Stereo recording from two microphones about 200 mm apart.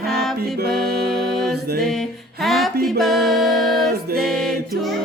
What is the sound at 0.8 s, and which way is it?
Music, 50° right (ahead or behind).